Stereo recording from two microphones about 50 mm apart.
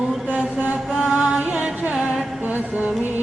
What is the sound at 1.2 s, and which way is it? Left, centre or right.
Music, right.